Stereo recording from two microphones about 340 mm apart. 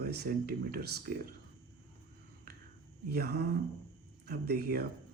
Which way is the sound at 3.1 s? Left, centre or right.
Right.